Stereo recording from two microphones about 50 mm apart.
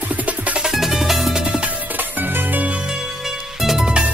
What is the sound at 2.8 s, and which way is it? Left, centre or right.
Music, centre.